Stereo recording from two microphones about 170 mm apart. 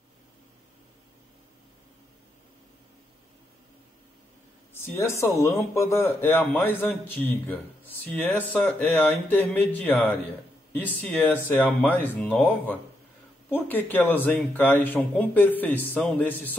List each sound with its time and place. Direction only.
4.7 s a man's voice: 15° left (ahead or behind)